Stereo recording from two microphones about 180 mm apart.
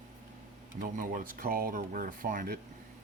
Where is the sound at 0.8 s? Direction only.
50° right (ahead or behind).